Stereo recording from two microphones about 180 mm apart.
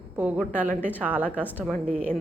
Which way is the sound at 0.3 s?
10° left (ahead or behind).